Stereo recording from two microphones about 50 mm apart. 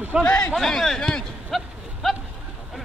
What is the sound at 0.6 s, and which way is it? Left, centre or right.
Speech, centre.